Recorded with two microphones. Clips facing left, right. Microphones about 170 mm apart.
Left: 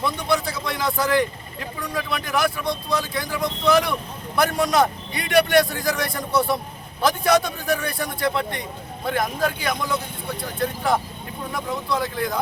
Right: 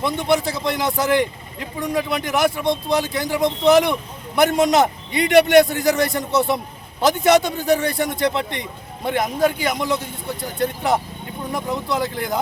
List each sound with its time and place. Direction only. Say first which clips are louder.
0.0 s a man's voice: right 4 dB; 25° right (ahead or behind)